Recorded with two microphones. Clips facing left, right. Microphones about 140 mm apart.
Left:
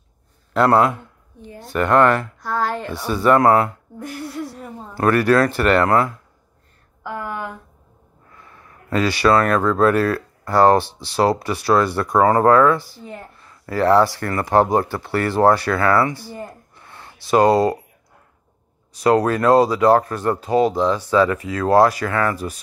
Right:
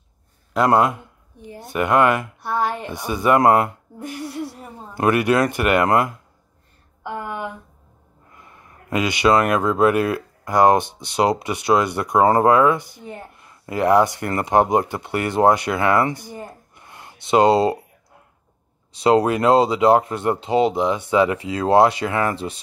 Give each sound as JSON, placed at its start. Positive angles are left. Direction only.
{"t": 0.5, "sound": "a man's voice", "side_deg": -10}
{"t": 2.4, "sound": "a woman's voice", "side_deg": -20}
{"t": 4.9, "sound": "a woman's voice", "side_deg": -15}
{"t": 7.0, "sound": "a sound", "side_deg": -25}
{"t": 8.3, "sound": "speech", "side_deg": -20}
{"t": 18.9, "sound": "speech", "side_deg": -25}